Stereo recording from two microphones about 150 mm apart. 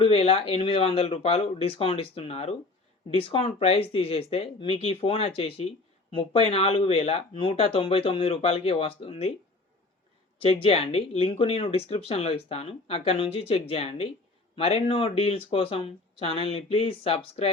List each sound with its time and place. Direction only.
0.0 s speech: 40° left (ahead or behind)
10.3 s speech: 40° left (ahead or behind)